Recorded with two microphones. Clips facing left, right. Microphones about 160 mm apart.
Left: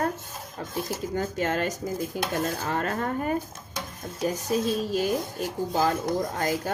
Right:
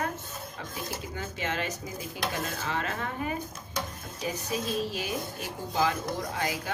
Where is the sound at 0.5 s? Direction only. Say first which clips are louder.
Left 8 dB; 45° left (ahead or behind).